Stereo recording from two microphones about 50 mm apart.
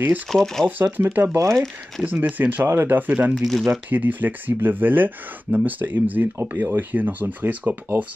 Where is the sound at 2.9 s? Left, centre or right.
Right.